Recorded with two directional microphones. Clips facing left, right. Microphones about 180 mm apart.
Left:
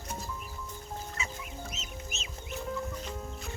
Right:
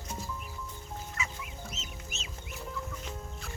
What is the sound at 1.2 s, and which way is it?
Chicken, 25° left (ahead or behind).